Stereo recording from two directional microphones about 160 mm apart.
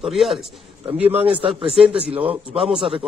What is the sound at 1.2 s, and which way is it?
Speech, 35° right (ahead or behind).